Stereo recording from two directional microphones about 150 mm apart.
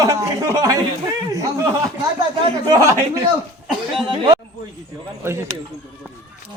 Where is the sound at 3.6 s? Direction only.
Centre (ahead or behind).